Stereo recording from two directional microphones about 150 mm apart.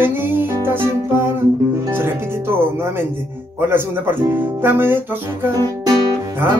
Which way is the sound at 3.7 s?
15° right (ahead or behind).